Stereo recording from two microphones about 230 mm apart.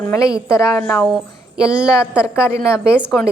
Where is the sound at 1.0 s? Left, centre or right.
Centre.